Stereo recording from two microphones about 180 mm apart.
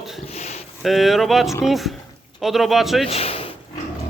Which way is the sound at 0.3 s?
35° left (ahead or behind).